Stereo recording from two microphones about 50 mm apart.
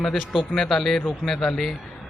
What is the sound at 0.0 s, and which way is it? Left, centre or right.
A man's voice, centre.